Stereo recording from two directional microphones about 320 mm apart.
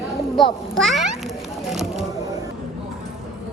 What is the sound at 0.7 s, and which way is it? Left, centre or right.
A child's voice, centre.